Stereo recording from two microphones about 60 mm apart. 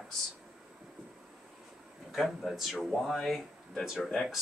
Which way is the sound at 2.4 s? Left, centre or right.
Centre.